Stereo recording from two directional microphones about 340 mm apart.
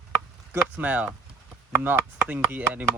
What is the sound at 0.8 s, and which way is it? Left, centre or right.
Speech, centre.